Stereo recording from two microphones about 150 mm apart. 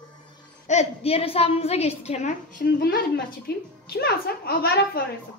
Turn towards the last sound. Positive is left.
turn(degrees=85)